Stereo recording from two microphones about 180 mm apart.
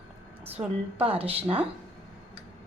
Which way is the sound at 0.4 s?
35° right (ahead or behind).